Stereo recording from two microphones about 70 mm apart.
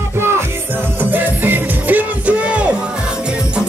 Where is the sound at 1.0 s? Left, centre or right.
Right.